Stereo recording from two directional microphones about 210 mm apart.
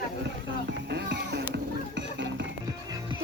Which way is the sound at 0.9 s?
55° right (ahead or behind).